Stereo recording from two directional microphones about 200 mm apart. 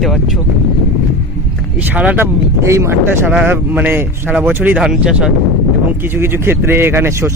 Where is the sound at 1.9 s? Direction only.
10° right (ahead or behind).